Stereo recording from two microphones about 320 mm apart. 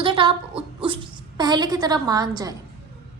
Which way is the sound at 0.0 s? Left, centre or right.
Centre.